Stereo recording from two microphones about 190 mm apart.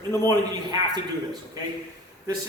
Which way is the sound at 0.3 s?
20° right (ahead or behind).